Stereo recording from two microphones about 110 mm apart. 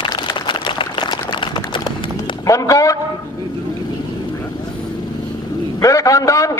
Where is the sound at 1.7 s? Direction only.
50° left (ahead or behind).